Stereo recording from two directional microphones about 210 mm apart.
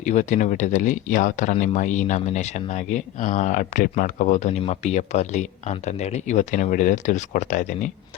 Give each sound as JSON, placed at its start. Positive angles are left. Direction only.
{"t": 0.0, "sound": "speech", "side_deg": 35}